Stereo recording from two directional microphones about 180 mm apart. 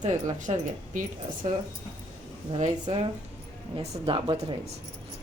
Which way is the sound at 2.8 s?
30° right (ahead or behind).